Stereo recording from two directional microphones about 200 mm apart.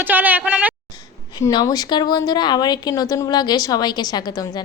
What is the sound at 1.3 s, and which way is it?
A woman's voice, 20° left (ahead or behind).